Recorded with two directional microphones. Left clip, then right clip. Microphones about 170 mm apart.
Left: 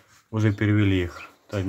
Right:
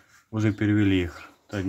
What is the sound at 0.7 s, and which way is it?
Speech, 10° right (ahead or behind).